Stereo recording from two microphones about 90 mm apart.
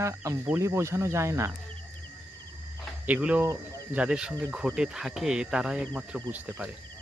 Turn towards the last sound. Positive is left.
turn(degrees=-15)  # may be behind; listen again after turning